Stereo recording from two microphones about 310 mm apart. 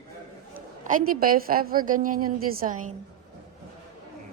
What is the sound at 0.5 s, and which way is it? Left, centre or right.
A woman's voice, right.